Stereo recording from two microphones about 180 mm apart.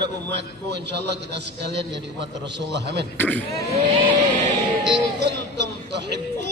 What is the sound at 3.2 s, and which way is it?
Speech, 10° left (ahead or behind).